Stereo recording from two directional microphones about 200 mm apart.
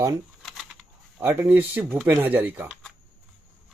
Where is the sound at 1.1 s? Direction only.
10° right (ahead or behind).